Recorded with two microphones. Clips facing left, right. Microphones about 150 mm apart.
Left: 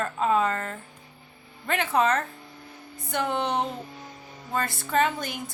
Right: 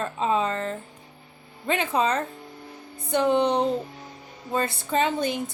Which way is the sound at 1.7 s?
15° right (ahead or behind).